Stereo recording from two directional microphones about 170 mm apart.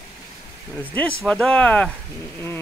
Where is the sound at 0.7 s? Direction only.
10° left (ahead or behind).